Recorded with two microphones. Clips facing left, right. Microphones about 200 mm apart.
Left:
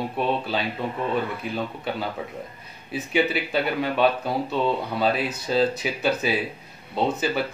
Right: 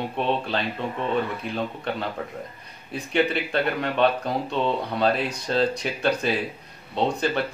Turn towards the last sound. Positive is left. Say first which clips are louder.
# even
turn(degrees=5)  # may be behind; listen again after turning